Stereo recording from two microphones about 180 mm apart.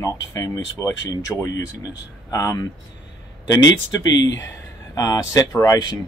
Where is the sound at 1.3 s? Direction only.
Centre (ahead or behind).